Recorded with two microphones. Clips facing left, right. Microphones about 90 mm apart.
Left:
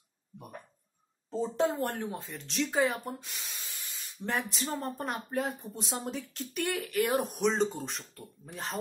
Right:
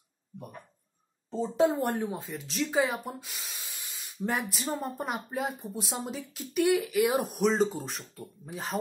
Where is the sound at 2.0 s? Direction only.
5° right (ahead or behind).